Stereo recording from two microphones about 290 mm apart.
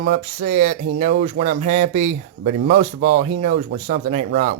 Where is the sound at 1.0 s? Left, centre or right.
Right.